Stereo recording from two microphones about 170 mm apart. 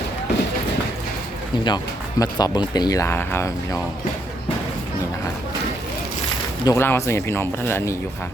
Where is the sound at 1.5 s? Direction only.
25° left (ahead or behind).